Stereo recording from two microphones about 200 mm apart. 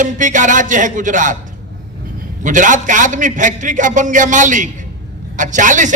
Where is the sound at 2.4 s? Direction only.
40° right (ahead or behind).